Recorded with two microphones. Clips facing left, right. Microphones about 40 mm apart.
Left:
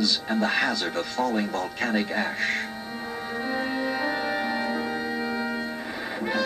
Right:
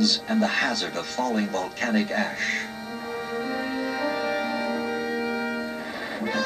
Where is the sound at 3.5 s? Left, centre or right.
Centre.